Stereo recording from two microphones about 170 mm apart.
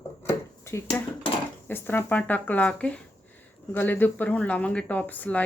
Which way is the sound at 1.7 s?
10° left (ahead or behind).